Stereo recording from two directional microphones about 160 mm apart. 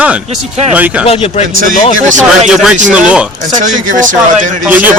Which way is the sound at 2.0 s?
50° right (ahead or behind).